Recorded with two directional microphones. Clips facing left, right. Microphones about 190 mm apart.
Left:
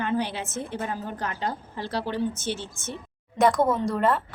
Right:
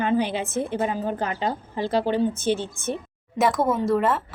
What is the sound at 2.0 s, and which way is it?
Speech, 55° right (ahead or behind).